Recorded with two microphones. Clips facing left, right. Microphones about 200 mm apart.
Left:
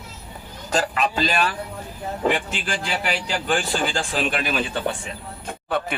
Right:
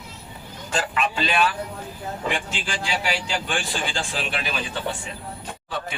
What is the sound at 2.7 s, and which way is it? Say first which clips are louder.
Speech: left 1 dB; 55° left (ahead or behind).